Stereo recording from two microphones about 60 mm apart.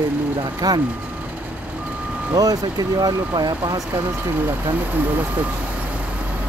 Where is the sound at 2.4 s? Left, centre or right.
Right.